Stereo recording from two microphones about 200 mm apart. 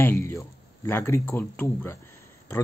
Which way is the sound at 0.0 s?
10° left (ahead or behind).